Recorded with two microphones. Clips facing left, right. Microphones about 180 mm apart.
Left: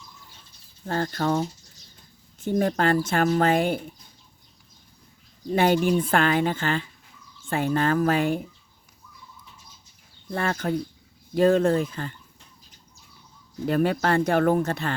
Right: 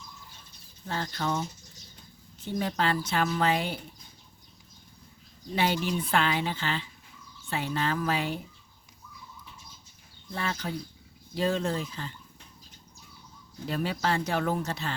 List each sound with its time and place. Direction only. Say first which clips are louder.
0.9 s speech: left 6 dB; 50° left (ahead or behind)
5.5 s speech: left 8 dB; 50° left (ahead or behind)
10.3 s speech: left 7 dB; 50° left (ahead or behind)
13.7 s speech: left 7 dB; 55° left (ahead or behind)